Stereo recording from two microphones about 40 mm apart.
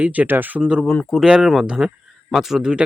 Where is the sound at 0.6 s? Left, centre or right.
Centre.